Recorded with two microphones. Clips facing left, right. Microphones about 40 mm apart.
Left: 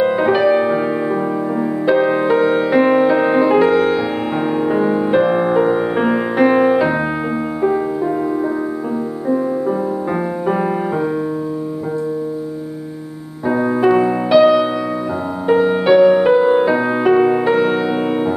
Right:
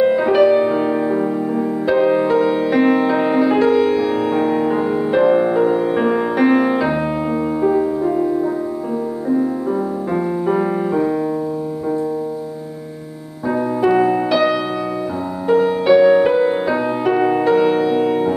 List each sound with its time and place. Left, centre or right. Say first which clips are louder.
0.0 s music: right 1 dB; centre
2.7 s music: left 3 dB; centre
13.5 s music: left 2 dB; centre
15.8 s music: even; centre
17.5 s music: right 1 dB; left